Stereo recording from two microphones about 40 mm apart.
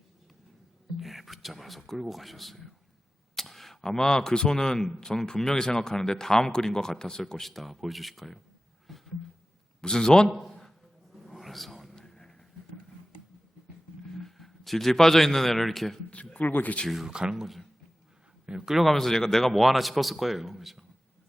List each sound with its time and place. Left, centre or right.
0.9 s a man's voice: centre
8.9 s a sound: centre
9.8 s speech: centre
11.1 s a sound: centre
11.9 s a sound: centre
14.1 s a man's voice: centre
16.0 s a sound: left
16.4 s speech: left
17.1 s speech: right
17.3 s a man's voice: centre
18.4 s speech: centre
18.8 s a man's voice: centre